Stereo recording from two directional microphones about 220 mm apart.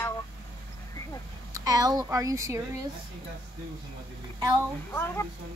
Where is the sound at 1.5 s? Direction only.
15° right (ahead or behind).